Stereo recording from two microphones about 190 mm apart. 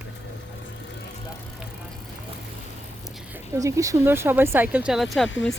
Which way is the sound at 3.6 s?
15° right (ahead or behind).